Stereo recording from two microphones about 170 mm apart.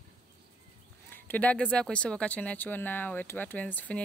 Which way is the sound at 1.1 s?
10° left (ahead or behind).